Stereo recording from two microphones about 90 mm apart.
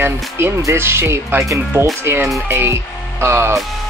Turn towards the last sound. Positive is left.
turn(degrees=-30)  # may be behind; listen again after turning